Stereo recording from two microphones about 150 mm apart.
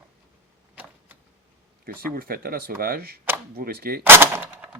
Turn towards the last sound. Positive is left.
turn(degrees=-15)  # may be behind; listen again after turning